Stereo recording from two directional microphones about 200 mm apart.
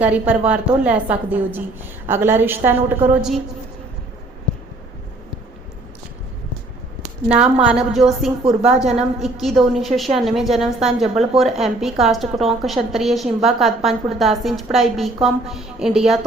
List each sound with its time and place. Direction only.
0.0 s a woman's voice: 5° right (ahead or behind)
7.3 s a woman's voice: 5° right (ahead or behind)